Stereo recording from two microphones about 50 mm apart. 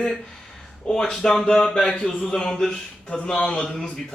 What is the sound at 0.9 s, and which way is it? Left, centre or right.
Speech, centre.